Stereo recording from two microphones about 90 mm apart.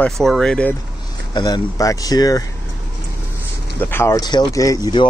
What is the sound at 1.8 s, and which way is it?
Speech, 40° left (ahead or behind).